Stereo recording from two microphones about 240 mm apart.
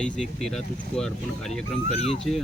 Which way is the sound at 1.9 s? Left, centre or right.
Left.